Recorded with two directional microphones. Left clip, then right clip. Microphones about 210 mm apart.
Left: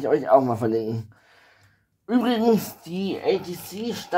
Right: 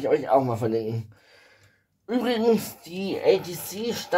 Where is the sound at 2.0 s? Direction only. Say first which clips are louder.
Left 1 dB; 25° left (ahead or behind).